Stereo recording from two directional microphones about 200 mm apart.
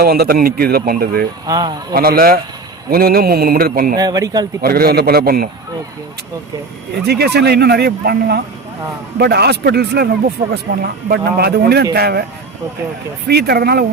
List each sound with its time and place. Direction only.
0.0 s a man's voice: 50° right (ahead or behind)
1.5 s speech: 20° right (ahead or behind)
1.9 s a man's voice: 50° right (ahead or behind)
3.9 s speech: 20° right (ahead or behind)
4.6 s a man's voice: 50° right (ahead or behind)
6.9 s a man's voice: 55° right (ahead or behind)
13.2 s a man's voice: 50° right (ahead or behind)